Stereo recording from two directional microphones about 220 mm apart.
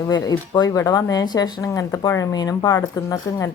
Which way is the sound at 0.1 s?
15° left (ahead or behind).